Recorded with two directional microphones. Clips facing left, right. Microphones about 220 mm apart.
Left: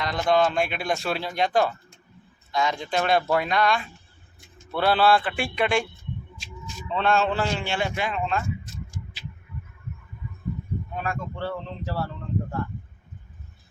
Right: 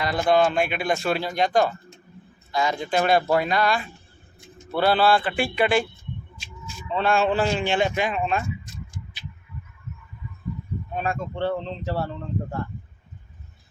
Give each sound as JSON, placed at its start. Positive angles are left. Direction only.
{"t": 0.0, "sound": "a man's voice", "side_deg": -5}
{"t": 10.9, "sound": "speech", "side_deg": -25}